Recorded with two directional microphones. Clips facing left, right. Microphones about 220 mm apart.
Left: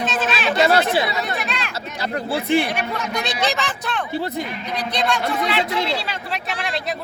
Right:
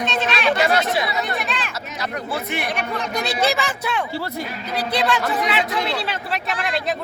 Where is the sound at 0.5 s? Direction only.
30° left (ahead or behind).